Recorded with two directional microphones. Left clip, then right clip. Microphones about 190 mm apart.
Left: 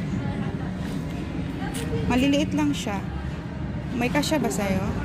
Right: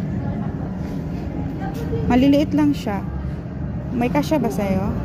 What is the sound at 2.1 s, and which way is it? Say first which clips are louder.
Speech: right 6 dB; 20° right (ahead or behind).